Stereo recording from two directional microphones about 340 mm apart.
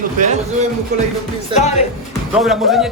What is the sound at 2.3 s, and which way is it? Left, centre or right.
Speech, centre.